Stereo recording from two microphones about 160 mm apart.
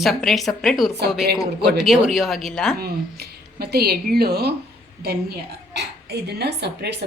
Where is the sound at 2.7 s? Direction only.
75° right (ahead or behind).